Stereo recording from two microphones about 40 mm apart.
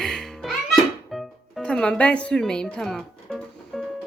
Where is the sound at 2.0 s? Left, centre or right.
Left.